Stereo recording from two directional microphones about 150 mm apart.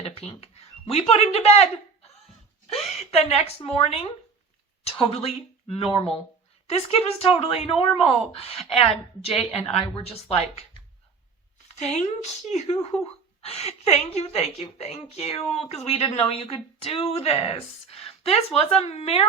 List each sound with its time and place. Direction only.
0.0 s a sound: 40° left (ahead or behind)
1.1 s a woman's voice: 45° left (ahead or behind)
11.8 s a woman's voice: 45° left (ahead or behind)
12.9 s speech: 5° left (ahead or behind)
13.4 s a woman's voice: 40° left (ahead or behind)